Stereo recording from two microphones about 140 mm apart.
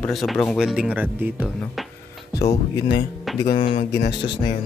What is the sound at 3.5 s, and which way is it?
Speech, 40° left (ahead or behind).